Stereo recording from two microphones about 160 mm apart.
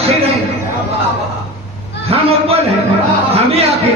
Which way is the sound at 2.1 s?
40° right (ahead or behind).